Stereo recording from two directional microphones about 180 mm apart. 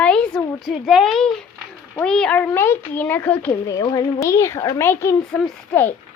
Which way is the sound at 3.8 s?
20° left (ahead or behind).